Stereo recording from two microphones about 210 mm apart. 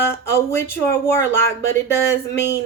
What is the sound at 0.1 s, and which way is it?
Speech, 10° left (ahead or behind).